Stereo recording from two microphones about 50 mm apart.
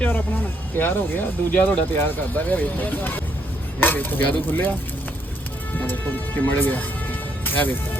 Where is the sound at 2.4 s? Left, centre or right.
Left.